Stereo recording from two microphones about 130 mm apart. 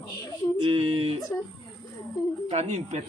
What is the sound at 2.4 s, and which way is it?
Speech, 60° right (ahead or behind).